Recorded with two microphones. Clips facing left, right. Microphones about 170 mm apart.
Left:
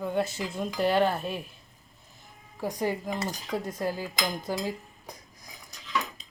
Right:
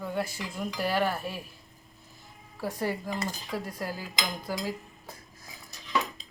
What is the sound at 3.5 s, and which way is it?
Dishes, 20° left (ahead or behind).